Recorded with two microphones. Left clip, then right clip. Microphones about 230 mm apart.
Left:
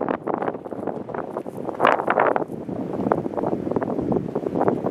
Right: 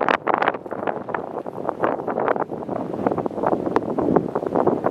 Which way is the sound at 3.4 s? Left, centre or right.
Centre.